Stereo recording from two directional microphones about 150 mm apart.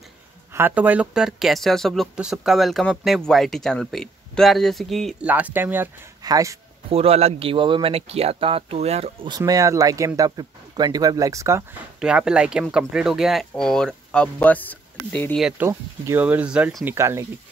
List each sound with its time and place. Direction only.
0.5 s speech: 15° right (ahead or behind)
5.3 s speech: 10° right (ahead or behind)
6.9 s speech: 40° right (ahead or behind)
9.4 s speech: 20° right (ahead or behind)
12.0 s speech: 5° right (ahead or behind); by 15.3 s 10° left (ahead or behind)
15.3 s speech: 5° right (ahead or behind)
15.6 s speech: 15° right (ahead or behind)